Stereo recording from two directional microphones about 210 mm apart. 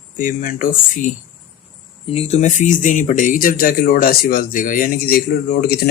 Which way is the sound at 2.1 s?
30° left (ahead or behind).